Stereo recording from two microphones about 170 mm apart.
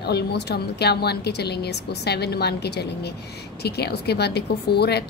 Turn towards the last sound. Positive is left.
turn(degrees=70)  # may be behind; listen again after turning